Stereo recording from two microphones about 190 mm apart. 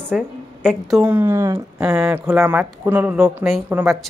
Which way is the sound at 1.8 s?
5° right (ahead or behind).